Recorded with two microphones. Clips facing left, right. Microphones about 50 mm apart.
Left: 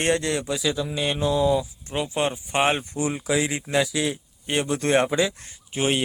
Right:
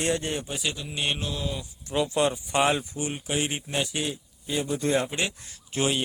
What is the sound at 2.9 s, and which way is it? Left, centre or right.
Speech, left.